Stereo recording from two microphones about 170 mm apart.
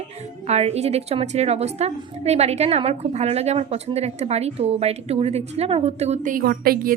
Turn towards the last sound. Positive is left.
turn(degrees=-60)  # may be behind; listen again after turning